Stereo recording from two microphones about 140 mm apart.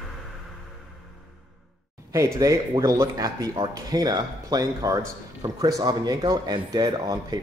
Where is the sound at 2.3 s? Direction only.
25° right (ahead or behind).